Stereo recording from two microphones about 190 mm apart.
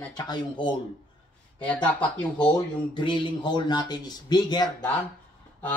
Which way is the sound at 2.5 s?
25° left (ahead or behind).